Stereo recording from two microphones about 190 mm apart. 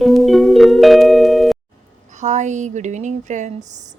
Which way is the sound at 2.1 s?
40° right (ahead or behind).